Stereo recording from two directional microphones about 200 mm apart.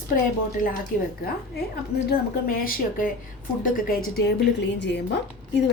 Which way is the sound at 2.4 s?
45° left (ahead or behind).